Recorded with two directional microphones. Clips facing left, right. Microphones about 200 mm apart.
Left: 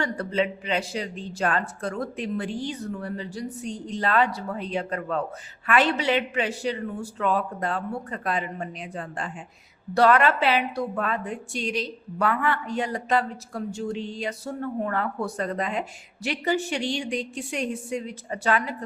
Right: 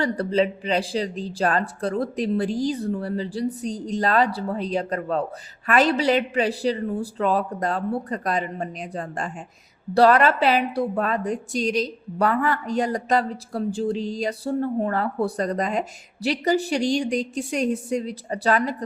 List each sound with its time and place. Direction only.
0.0 s a woman's voice: 35° right (ahead or behind)